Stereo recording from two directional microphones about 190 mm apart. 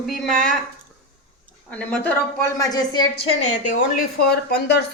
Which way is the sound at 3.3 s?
40° left (ahead or behind).